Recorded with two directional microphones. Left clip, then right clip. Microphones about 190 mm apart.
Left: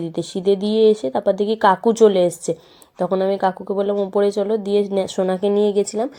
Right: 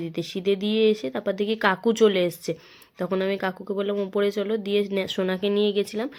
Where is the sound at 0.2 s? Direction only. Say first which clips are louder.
Left 6 dB; 5° left (ahead or behind).